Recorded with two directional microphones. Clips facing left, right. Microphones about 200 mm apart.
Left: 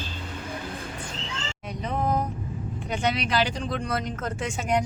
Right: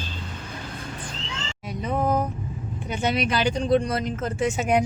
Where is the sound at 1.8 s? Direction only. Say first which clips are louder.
Right 3 dB; 5° right (ahead or behind).